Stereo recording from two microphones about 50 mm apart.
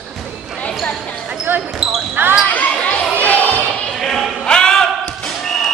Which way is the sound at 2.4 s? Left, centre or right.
Left.